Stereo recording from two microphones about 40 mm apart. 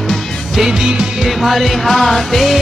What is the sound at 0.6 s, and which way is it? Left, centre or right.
Music, centre.